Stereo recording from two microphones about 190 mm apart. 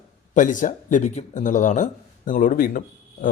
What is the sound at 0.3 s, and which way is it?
Speech, 40° left (ahead or behind).